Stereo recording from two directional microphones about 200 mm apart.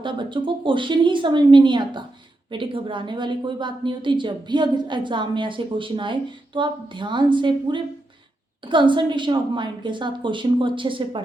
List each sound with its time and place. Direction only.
0.0 s a woman's voice: 25° right (ahead or behind)